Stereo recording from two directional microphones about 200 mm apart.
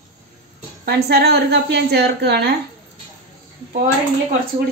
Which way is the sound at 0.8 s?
55° right (ahead or behind).